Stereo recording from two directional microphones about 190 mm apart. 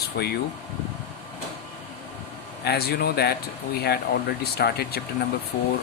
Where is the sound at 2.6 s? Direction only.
55° left (ahead or behind).